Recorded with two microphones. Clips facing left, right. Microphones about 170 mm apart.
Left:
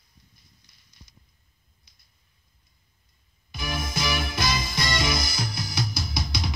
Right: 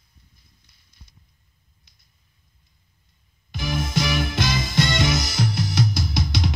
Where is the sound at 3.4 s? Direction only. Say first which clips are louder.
Right 5 dB; 70° right (ahead or behind).